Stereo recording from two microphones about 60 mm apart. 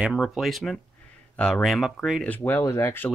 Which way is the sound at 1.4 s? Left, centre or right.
Centre.